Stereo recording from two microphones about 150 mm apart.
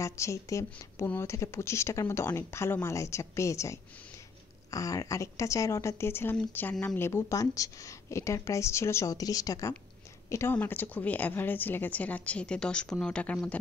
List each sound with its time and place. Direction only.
0.0 s a woman's voice: 20° left (ahead or behind)